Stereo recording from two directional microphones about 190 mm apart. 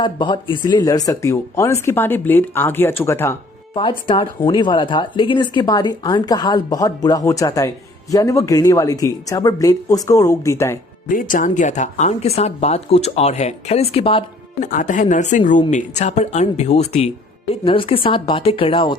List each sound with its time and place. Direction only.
0.0 s speech: 25° left (ahead or behind)
3.8 s a woman's voice: 25° left (ahead or behind)
11.1 s a woman's voice: 45° left (ahead or behind); by 14.3 s 30° left (ahead or behind)
14.6 s a woman's voice: 45° left (ahead or behind); by 18.9 s 25° left (ahead or behind)